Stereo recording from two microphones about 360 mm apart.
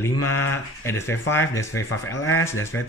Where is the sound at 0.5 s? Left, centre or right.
Centre.